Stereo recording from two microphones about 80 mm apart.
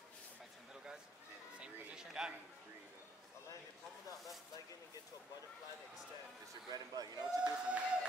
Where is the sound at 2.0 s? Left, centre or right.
Centre.